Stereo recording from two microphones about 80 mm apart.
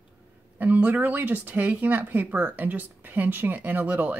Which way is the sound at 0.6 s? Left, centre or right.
Right.